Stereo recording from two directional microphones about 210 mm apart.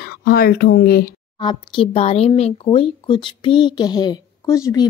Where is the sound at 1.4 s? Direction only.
25° left (ahead or behind).